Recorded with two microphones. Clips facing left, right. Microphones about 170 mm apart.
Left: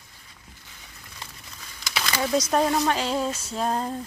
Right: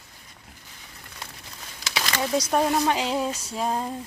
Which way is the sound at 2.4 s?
5° right (ahead or behind).